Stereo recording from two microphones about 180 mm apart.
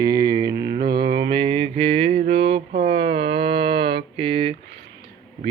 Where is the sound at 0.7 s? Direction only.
60° right (ahead or behind).